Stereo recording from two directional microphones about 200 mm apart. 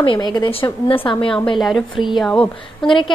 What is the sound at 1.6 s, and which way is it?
A woman's voice, centre (ahead or behind).